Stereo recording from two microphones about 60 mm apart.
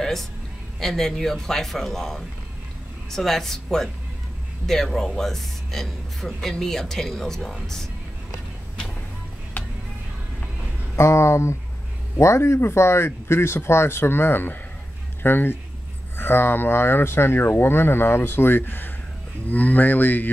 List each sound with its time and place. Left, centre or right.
0.0 s music: centre
0.7 s speech: centre
9.6 s music: left
11.0 s speech: left